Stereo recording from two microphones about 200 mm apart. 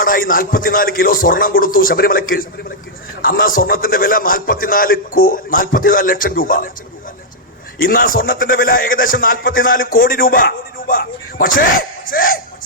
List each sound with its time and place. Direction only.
0.0 s a man's voice: 45° left (ahead or behind)
7.8 s a man's voice: 45° left (ahead or behind)